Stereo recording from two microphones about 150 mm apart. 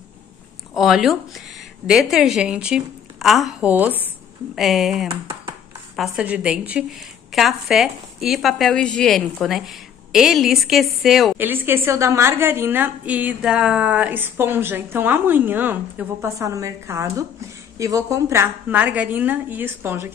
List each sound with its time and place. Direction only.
0.7 s speech: 5° right (ahead or behind)
4.6 s a woman's voice: centre (ahead or behind)
11.3 s a woman's voice: 15° right (ahead or behind)